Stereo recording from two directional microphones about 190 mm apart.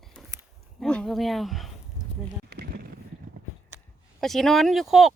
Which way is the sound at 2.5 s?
55° right (ahead or behind).